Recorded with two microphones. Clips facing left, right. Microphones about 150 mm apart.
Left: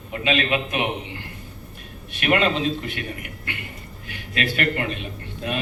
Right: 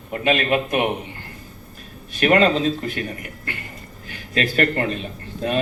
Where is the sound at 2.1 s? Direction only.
40° right (ahead or behind).